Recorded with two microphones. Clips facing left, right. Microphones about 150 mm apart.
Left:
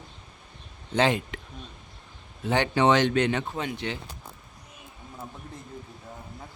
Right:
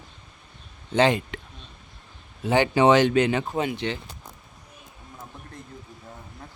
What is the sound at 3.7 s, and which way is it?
Speech, 5° left (ahead or behind).